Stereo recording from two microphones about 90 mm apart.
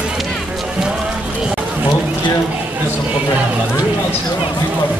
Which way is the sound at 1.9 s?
60° left (ahead or behind).